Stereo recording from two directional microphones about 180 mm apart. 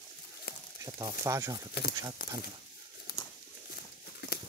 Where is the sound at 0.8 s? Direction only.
20° right (ahead or behind).